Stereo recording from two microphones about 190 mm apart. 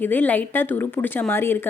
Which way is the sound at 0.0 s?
10° left (ahead or behind).